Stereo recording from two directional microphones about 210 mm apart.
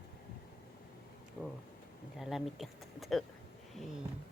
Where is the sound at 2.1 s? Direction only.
Centre (ahead or behind).